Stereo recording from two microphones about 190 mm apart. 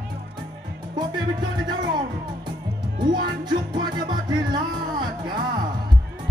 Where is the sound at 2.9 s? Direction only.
45° right (ahead or behind).